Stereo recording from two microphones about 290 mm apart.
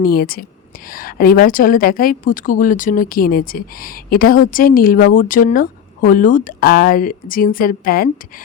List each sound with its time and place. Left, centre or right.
0.0 s a woman's voice: left